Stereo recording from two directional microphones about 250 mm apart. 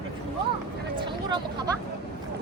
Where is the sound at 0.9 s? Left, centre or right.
Centre.